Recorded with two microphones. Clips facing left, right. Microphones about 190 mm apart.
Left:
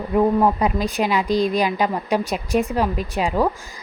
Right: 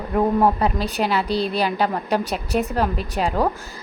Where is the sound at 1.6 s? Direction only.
10° left (ahead or behind).